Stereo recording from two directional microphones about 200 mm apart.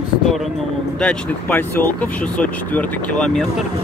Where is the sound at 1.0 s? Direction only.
5° left (ahead or behind).